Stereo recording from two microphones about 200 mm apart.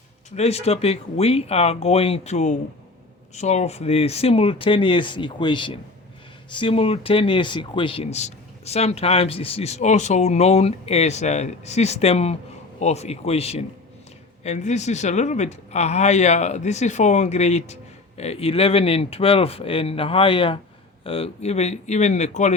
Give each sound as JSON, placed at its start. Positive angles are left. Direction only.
{"t": 0.3, "sound": "speech", "side_deg": 30}